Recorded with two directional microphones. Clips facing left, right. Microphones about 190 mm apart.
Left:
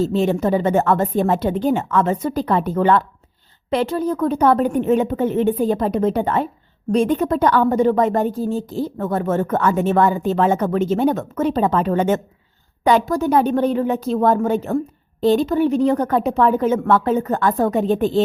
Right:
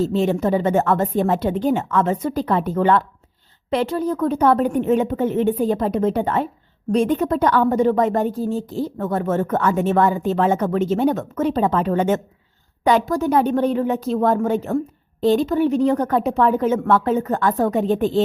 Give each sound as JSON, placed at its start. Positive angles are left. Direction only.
{"t": 0.1, "sound": "a woman's voice", "side_deg": 35}